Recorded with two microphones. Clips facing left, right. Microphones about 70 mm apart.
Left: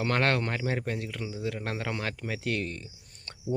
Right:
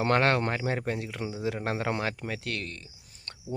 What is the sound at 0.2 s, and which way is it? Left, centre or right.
Speech, centre.